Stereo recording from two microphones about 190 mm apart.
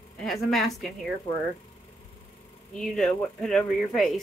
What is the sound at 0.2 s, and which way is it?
Speech, centre (ahead or behind).